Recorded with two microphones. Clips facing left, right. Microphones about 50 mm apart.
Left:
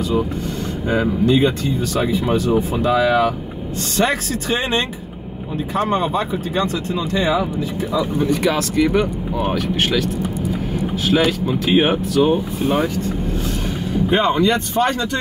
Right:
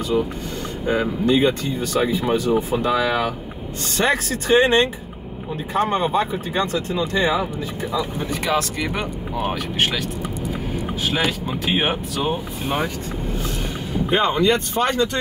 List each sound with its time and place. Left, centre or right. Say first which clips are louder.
0.8 s speech: left 2 dB; centre
9.8 s speech: left 1 dB; centre
11.1 s speech: left 6 dB; centre
14.1 s speech: left 1 dB; centre